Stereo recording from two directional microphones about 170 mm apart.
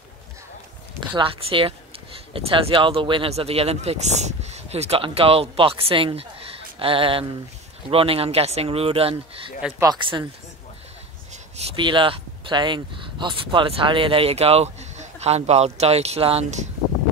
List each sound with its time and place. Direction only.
1.1 s speech: 30° right (ahead or behind)
9.6 s speech: 5° right (ahead or behind)
11.5 s speech: 30° right (ahead or behind)